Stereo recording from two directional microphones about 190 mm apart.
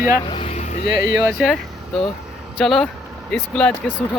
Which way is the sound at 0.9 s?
55° left (ahead or behind).